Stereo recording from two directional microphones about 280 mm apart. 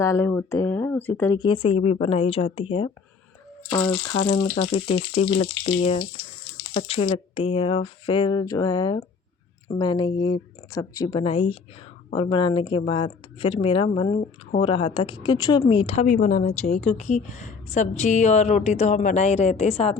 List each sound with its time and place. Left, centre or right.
0.0 s a woman's voice: centre